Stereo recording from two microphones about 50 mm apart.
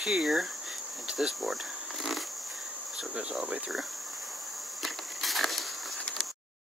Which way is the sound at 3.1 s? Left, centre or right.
Centre.